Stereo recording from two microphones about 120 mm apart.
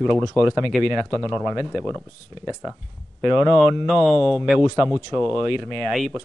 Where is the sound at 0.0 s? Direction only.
Centre (ahead or behind).